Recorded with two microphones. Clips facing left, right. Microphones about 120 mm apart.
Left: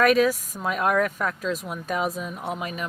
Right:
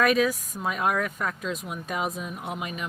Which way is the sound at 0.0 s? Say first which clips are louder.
Left 3 dB; centre (ahead or behind).